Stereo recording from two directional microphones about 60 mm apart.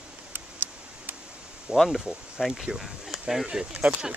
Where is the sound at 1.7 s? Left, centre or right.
Centre.